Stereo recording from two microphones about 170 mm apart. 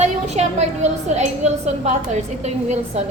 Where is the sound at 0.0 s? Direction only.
40° right (ahead or behind).